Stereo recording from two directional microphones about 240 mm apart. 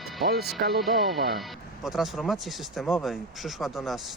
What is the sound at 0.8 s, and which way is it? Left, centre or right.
Speech, centre.